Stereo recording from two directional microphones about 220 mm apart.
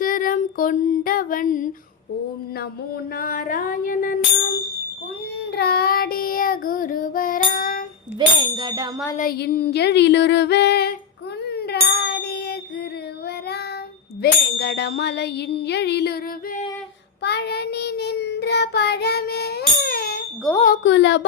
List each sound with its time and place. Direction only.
0.0 s female singing: 40° left (ahead or behind)
3.2 s child singing: 40° left (ahead or behind)
5.5 s child singing: 45° left (ahead or behind)
8.4 s ding: 20° right (ahead or behind)
9.1 s ding: 45° left (ahead or behind)
11.4 s a sound: 50° left (ahead or behind)
14.2 s ding: 50° left (ahead or behind)
17.2 s child singing: 50° left (ahead or behind)
20.8 s carnatic music: 55° left (ahead or behind)